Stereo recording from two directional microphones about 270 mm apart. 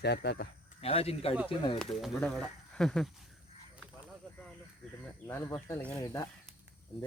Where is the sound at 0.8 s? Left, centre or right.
Left.